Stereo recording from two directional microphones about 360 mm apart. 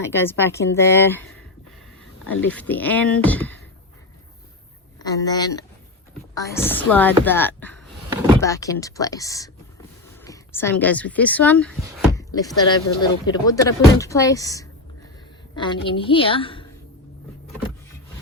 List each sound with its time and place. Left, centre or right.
0.3 s speech: centre
2.5 s speech: centre
5.0 s speech: centre